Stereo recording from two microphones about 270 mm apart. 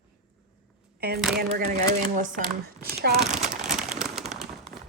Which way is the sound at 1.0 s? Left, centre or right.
Right.